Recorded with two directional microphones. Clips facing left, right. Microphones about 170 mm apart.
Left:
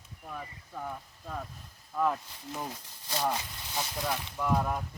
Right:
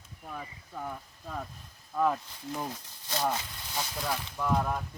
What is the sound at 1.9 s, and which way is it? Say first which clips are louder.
Speech: right 2 dB; 5° right (ahead or behind).